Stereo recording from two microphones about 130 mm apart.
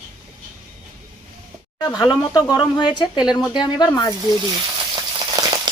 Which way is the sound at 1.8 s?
30° left (ahead or behind).